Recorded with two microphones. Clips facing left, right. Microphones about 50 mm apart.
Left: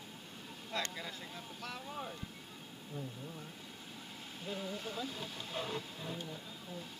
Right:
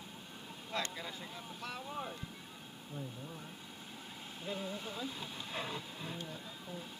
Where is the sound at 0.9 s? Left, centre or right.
Centre.